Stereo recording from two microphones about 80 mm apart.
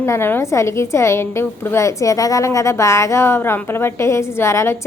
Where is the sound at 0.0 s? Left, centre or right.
Left.